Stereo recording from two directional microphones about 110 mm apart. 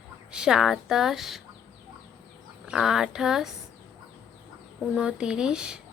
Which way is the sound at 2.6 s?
5° right (ahead or behind).